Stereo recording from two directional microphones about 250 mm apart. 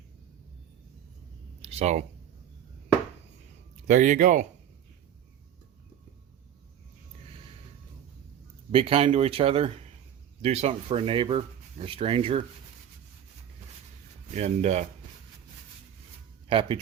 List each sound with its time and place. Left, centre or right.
1.6 s a sound: right
3.8 s speech: right
8.7 s speech: right
14.3 s speech: right
16.5 s speech: right